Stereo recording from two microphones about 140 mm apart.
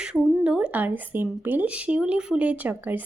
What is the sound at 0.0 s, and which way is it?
Speech, 5° right (ahead or behind).